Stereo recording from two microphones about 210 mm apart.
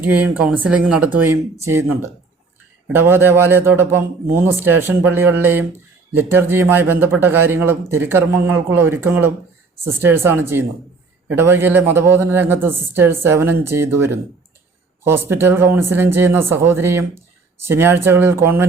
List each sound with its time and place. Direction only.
0.0 s a man's voice: 5° right (ahead or behind)